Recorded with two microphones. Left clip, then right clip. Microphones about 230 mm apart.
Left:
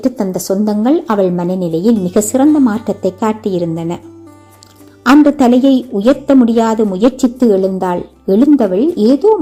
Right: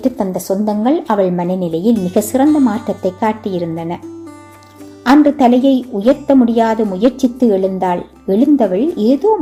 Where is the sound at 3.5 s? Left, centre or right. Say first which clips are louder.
Left 3 dB; left.